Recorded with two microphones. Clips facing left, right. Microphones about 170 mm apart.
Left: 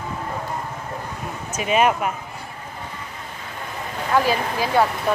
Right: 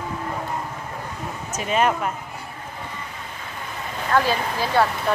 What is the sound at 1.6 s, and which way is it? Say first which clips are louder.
Speech: left 2 dB; 15° left (ahead or behind).